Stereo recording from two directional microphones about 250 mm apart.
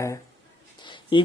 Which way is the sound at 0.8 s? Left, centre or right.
Centre.